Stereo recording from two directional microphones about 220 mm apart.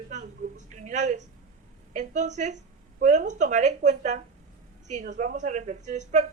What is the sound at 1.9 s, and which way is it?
Speech, 35° right (ahead or behind).